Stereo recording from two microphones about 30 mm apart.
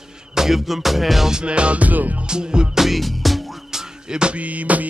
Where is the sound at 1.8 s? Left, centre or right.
Right.